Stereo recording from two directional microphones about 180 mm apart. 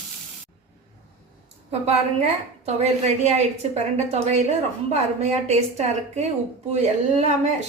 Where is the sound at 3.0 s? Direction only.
40° right (ahead or behind).